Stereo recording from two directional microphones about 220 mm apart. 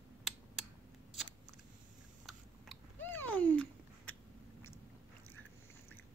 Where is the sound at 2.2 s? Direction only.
5° left (ahead or behind).